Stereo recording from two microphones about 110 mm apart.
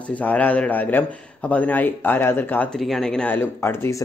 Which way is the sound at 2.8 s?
5° left (ahead or behind).